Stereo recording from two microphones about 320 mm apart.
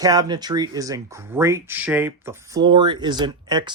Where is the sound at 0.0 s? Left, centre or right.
Centre.